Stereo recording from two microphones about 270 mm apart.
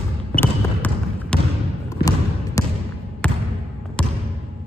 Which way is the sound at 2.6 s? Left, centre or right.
Centre.